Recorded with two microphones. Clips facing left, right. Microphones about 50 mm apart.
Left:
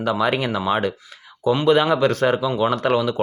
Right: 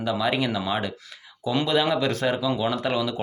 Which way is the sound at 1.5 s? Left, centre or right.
Left.